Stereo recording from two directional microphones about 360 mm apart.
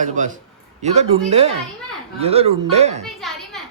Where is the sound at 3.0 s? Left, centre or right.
Centre.